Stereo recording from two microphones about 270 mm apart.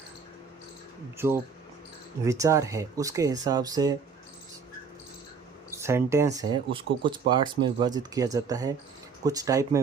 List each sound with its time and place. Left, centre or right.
2.2 s speech: centre
5.7 s speech: centre